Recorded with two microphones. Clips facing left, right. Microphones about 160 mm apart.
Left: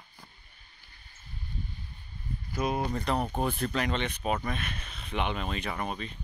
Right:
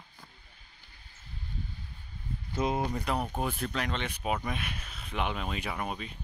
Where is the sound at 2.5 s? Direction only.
25° right (ahead or behind).